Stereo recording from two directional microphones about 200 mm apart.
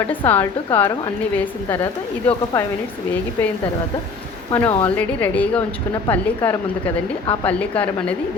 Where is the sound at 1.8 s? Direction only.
25° left (ahead or behind).